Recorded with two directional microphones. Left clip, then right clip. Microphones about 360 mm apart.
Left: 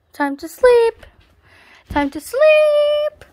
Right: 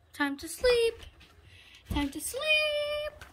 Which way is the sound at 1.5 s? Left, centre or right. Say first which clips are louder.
Left 15 dB; left.